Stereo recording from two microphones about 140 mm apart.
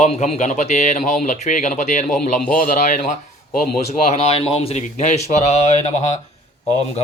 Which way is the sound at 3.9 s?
50° left (ahead or behind).